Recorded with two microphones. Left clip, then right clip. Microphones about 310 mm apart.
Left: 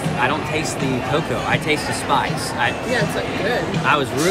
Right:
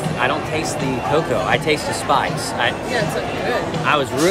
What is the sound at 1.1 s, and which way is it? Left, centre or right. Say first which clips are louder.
Speech: right 4 dB; centre.